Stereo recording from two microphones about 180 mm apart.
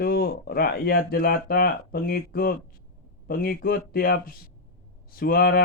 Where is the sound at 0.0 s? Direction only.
55° left (ahead or behind).